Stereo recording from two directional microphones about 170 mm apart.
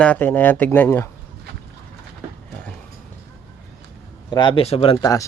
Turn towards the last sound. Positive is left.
turn(degrees=20)  # may be behind; listen again after turning